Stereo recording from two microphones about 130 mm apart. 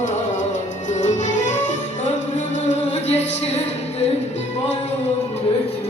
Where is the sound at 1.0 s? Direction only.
70° left (ahead or behind).